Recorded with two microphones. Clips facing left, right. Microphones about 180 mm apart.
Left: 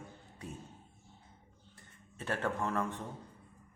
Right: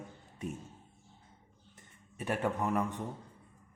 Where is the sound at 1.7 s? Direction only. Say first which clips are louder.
Right 4 dB; 15° right (ahead or behind).